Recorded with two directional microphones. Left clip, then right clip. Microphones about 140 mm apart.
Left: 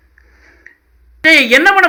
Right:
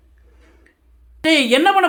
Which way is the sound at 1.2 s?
15° right (ahead or behind).